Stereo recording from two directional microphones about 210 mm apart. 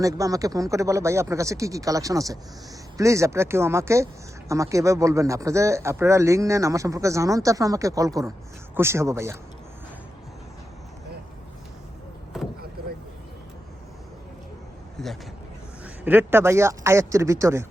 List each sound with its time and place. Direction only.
0.0 s speech: 15° right (ahead or behind)
14.9 s speech: centre (ahead or behind)
15.8 s speech: 10° right (ahead or behind)